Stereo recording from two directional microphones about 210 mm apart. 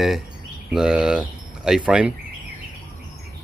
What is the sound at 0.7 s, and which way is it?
Speech, 5° right (ahead or behind).